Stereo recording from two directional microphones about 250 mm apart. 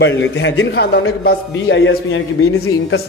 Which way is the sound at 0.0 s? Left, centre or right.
Left.